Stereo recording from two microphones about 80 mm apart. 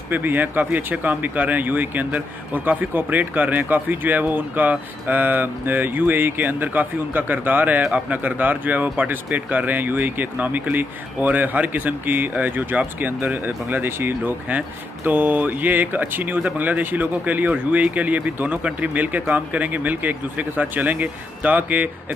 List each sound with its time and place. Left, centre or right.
0.1 s speech: right